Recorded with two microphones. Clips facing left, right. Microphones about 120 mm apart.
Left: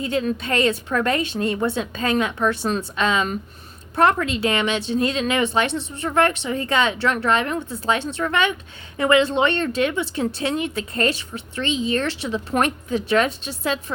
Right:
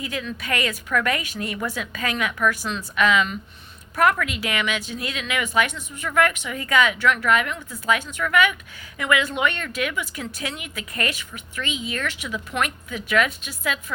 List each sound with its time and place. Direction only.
0.0 s a woman's voice: 30° left (ahead or behind)